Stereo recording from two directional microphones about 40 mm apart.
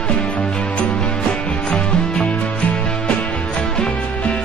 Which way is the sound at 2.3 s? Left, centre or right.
Left.